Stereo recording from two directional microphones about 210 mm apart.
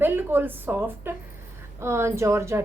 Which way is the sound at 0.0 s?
10° right (ahead or behind).